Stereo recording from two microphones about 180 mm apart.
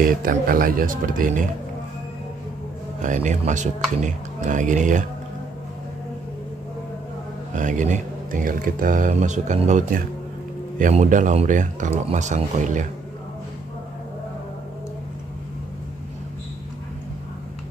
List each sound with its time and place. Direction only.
0.0 s speech: 50° right (ahead or behind)
3.0 s speech: 40° right (ahead or behind)
7.5 s speech: 45° right (ahead or behind)